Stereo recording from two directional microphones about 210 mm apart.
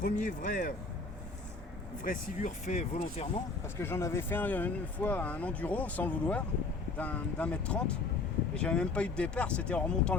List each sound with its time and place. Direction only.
0.0 s speech: 40° left (ahead or behind)
2.0 s speech: 35° left (ahead or behind)
3.8 s speech: 10° left (ahead or behind)